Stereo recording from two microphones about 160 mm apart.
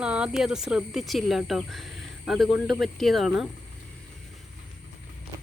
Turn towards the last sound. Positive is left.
turn(degrees=0)  # may be behind; listen again after turning